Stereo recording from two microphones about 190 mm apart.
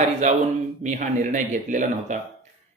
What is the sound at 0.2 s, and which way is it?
A man's voice, 40° right (ahead or behind).